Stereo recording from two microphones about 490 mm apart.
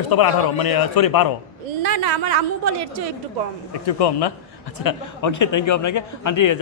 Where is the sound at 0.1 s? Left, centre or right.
Left.